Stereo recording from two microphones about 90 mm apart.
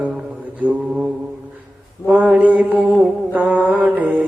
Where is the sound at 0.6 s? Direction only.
15° right (ahead or behind).